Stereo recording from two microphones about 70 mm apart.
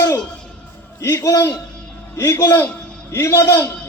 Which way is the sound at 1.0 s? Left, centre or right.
Left.